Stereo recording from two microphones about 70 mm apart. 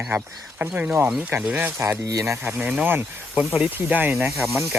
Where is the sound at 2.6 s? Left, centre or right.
Centre.